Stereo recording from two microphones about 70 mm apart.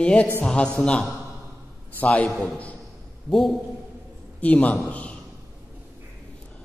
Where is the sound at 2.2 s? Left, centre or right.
Centre.